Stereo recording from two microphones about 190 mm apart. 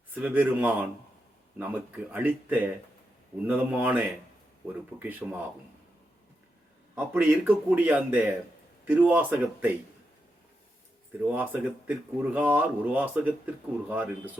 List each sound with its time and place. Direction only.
0.1 s speech: 10° right (ahead or behind)
6.9 s speech: 10° right (ahead or behind)
11.2 s speech: 10° right (ahead or behind)